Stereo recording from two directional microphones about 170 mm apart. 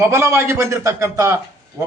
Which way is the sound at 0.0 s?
15° right (ahead or behind).